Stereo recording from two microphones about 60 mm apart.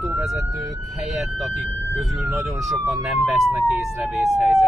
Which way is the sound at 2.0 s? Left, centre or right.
Centre.